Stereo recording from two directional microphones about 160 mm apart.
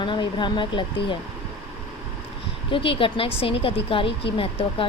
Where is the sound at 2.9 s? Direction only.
35° left (ahead or behind).